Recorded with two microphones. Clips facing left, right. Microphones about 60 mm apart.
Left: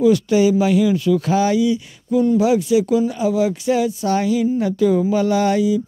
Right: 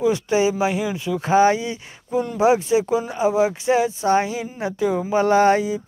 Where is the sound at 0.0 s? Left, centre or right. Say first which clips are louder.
Left 4 dB; right.